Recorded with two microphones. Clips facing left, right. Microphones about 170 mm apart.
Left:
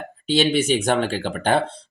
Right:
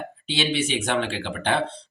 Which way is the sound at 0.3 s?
45° left (ahead or behind).